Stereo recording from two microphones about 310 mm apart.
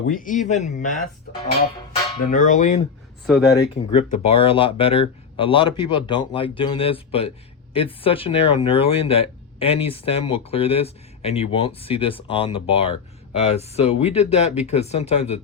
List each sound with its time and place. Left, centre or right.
0.1 s speech: left
2.3 s speech: left
3.2 s speech: centre
3.6 s speech: centre